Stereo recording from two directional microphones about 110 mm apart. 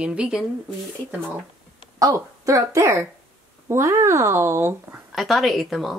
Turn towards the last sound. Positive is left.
turn(degrees=0)  # may be behind; listen again after turning